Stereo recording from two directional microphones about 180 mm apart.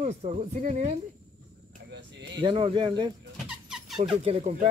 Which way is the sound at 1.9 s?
80° right.